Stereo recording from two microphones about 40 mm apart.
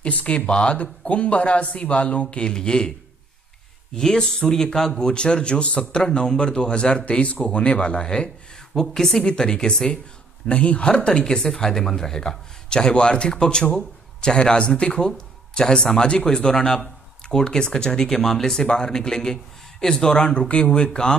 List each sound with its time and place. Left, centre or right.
0.0 s speech: left
0.5 s speech: left
3.9 s speech: centre
8.8 s a woman's voice: centre
9.2 s speech: left
10.4 s speech: left